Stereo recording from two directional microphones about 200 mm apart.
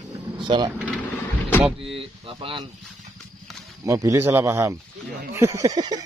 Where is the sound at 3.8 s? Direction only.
15° right (ahead or behind).